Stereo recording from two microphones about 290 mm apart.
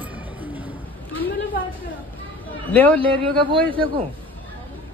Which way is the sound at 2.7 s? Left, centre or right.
Centre.